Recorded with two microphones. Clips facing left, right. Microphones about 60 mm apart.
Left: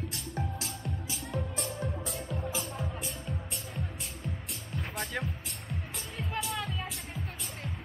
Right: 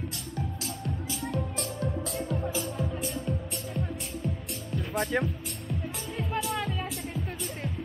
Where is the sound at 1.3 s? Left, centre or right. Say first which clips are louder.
Right 1 dB; centre.